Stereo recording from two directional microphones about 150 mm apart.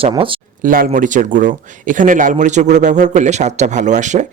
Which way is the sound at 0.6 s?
70° right (ahead or behind).